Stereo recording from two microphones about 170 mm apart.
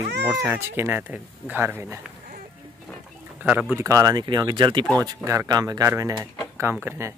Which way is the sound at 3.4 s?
10° right (ahead or behind).